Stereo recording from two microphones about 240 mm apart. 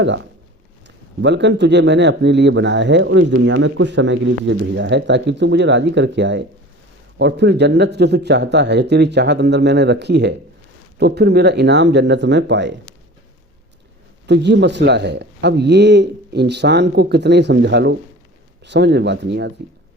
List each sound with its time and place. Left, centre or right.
0.9 s a man's voice: right
14.3 s a man's voice: right